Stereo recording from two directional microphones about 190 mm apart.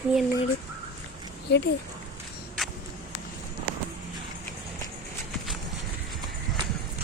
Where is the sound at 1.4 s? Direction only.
60° left (ahead or behind).